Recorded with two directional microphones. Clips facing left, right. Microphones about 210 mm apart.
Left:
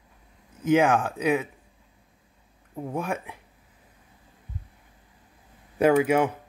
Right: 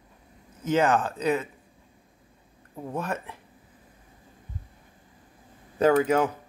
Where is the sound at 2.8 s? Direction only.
10° left (ahead or behind).